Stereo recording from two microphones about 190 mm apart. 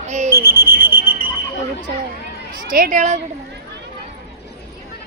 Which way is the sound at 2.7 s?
45° right (ahead or behind).